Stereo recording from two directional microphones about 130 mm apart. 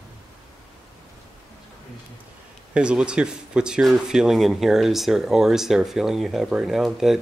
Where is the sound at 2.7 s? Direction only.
10° right (ahead or behind).